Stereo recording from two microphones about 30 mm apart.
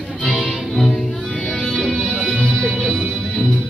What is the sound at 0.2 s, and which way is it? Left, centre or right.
Music, left.